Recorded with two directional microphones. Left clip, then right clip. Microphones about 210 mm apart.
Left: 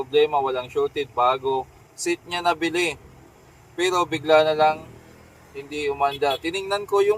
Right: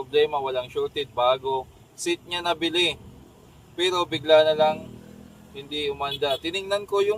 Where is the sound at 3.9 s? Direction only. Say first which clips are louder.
Left 1 dB; centre (ahead or behind).